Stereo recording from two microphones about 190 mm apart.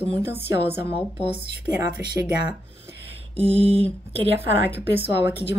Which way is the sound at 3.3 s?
30° right (ahead or behind).